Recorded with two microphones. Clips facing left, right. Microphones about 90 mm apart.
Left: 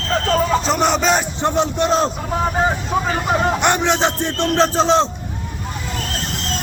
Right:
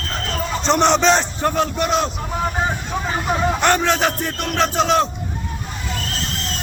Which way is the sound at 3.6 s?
20° left (ahead or behind).